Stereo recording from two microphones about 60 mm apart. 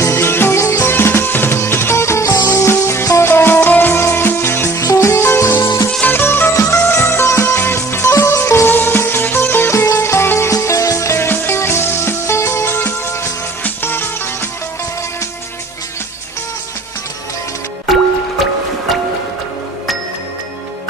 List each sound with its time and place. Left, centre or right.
0.0 s music: left
2.3 s music: left
4.7 s music: left
5.1 s music: left
6.0 s music: left
8.4 s music: left
10.5 s music: left
11.2 s music: left
17.8 s music: centre